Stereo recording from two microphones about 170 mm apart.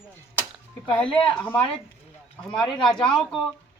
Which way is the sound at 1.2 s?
30° left (ahead or behind).